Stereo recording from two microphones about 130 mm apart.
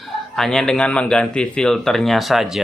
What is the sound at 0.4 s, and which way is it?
Speech, 5° left (ahead or behind).